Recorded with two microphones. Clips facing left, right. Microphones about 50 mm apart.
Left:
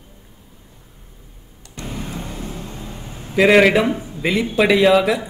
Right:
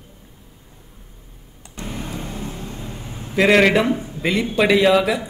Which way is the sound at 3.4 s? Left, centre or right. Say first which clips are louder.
Left 2 dB; centre.